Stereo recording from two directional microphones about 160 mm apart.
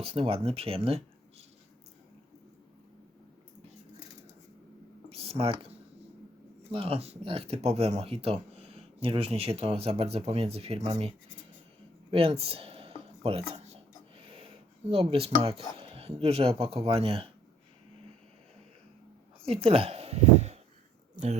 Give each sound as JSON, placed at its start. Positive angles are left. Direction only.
{"t": 0.0, "sound": "speech", "side_deg": -35}
{"t": 5.0, "sound": "a sound", "side_deg": -40}
{"t": 6.7, "sound": "speech", "side_deg": -35}
{"t": 12.1, "sound": "a sound", "side_deg": -40}
{"t": 14.3, "sound": "speech", "side_deg": -35}
{"t": 19.5, "sound": "speech", "side_deg": -35}